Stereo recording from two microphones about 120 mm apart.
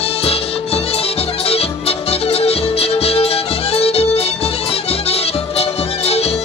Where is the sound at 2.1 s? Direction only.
55° left (ahead or behind).